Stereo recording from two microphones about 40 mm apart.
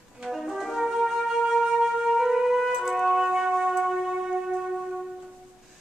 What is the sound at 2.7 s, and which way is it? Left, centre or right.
Music, centre.